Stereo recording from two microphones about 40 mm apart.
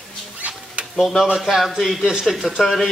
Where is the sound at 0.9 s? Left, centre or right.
Centre.